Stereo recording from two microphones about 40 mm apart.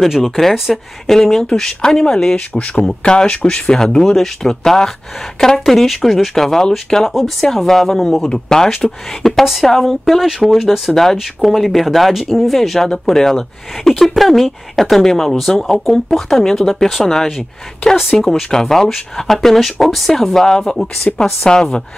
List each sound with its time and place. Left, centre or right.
0.0 s speech: centre
3.0 s speech: left; by 12.8 s centre
12.8 s speech: centre
18.3 s a woman's voice: centre